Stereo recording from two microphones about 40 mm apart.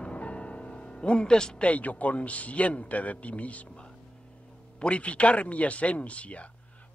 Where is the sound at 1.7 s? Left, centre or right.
Left.